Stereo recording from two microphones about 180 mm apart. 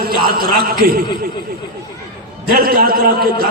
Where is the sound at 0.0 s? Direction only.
55° right (ahead or behind).